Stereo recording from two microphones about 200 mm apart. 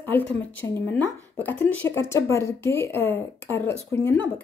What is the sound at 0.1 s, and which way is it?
Speech, 10° left (ahead or behind).